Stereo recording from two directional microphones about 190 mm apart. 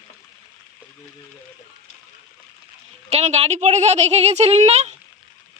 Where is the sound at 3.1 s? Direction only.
35° right (ahead or behind).